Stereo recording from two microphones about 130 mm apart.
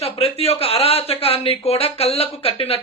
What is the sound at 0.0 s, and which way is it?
Speech, 50° left (ahead or behind).